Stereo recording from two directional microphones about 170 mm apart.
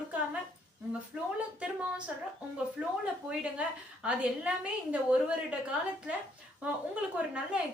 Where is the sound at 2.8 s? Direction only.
5° right (ahead or behind).